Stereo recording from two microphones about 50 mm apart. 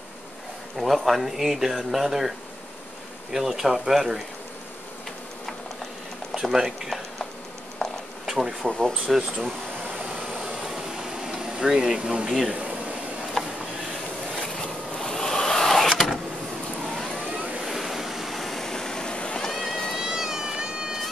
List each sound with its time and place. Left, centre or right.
0.7 s speech: centre
3.3 s speech: centre
6.5 s speech: centre
7.8 s a sound: centre
8.3 s speech: centre
8.7 s speech: centre
9.1 s air conditioning: centre
12.3 s speech: centre
13.4 s a sound: centre
15.0 s a sound: centre
15.9 s vehicle: centre
17.6 s waves: centre
19.5 s music: centre
19.9 s cat: centre